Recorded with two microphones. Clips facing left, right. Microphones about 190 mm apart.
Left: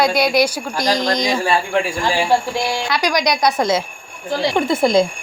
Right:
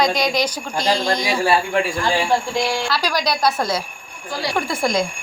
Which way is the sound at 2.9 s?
15° left (ahead or behind).